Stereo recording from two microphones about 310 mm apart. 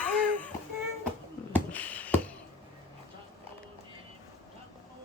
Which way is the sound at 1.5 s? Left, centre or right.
Centre.